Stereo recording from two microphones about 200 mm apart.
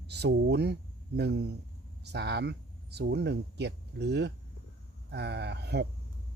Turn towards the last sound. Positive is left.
turn(degrees=-55)  # may be behind; listen again after turning